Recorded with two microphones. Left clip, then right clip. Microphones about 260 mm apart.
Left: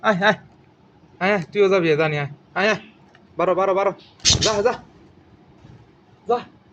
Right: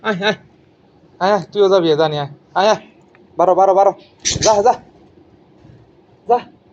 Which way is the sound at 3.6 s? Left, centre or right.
Left.